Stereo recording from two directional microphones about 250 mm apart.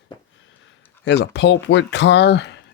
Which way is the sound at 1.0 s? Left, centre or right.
Left.